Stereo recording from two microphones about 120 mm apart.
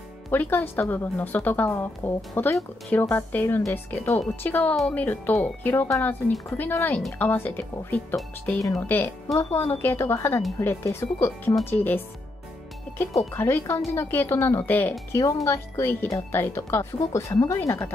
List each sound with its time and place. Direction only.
0.3 s speech: 15° left (ahead or behind)
9.3 s speech: 25° left (ahead or behind)